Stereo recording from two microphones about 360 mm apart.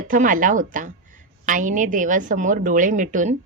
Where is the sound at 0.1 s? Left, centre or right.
Right.